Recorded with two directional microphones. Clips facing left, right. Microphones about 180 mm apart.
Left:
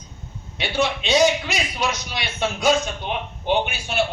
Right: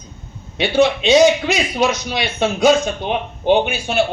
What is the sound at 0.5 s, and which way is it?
A man's voice, 20° right (ahead or behind).